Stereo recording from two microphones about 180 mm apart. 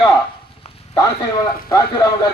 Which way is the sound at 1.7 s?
20° left (ahead or behind).